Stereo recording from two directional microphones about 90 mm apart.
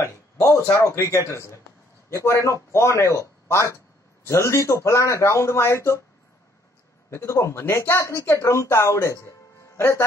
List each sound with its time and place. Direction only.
0.0 s speech: 35° left (ahead or behind)
7.1 s a man's voice: 30° left (ahead or behind)